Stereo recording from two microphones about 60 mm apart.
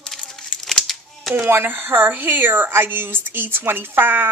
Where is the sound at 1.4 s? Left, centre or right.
Right.